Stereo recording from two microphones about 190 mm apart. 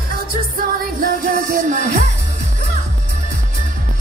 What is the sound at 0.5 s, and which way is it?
Music, 50° right (ahead or behind).